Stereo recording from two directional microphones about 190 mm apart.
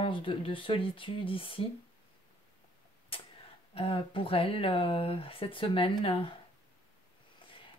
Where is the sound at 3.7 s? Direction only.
30° left (ahead or behind).